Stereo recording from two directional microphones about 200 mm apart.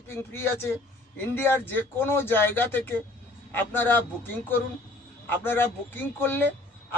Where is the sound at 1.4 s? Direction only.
10° left (ahead or behind).